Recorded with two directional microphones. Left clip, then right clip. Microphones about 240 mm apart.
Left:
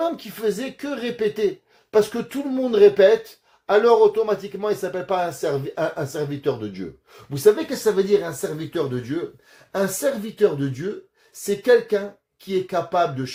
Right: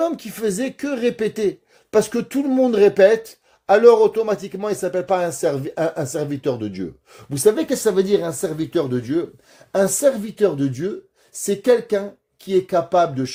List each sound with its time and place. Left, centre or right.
0.0 s speech: right